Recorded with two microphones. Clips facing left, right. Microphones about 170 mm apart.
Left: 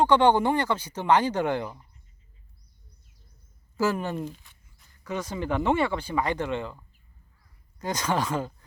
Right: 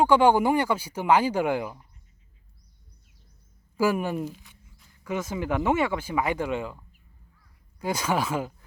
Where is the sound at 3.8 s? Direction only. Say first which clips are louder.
Right 2 dB; 10° right (ahead or behind).